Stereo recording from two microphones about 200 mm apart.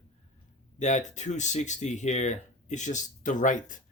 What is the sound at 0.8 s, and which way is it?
Speech, 35° left (ahead or behind).